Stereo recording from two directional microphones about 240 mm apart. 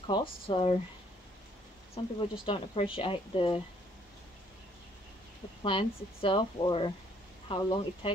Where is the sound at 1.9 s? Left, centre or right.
Left.